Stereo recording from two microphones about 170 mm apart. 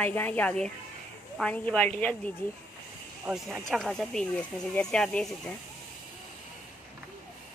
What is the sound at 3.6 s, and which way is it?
A woman's voice, centre (ahead or behind).